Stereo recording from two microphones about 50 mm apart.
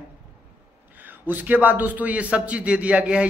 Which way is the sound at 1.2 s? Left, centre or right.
Right.